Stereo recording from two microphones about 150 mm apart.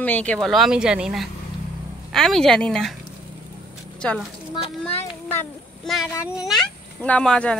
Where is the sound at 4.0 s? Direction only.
5° left (ahead or behind).